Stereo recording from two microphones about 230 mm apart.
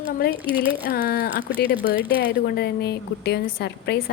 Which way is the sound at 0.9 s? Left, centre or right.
Left.